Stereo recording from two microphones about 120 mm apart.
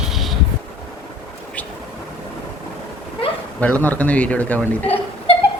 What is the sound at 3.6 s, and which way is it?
A man's voice, 10° left (ahead or behind).